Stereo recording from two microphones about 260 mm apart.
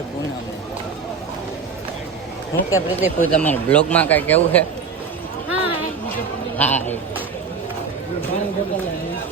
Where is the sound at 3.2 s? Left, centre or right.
Centre.